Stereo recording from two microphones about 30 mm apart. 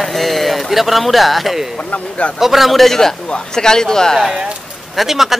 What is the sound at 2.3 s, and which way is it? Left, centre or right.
Speech, centre.